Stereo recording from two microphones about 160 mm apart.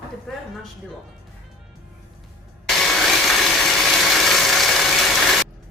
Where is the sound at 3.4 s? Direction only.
Centre (ahead or behind).